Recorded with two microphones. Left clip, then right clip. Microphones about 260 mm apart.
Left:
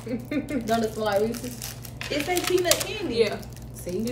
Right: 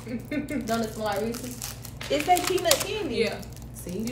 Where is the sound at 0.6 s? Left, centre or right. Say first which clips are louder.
Left 4 dB; centre.